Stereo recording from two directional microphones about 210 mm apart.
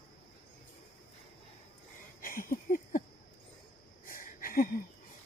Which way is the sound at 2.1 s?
40° left (ahead or behind).